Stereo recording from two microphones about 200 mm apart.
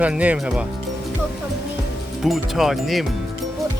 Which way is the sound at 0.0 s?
5° right (ahead or behind).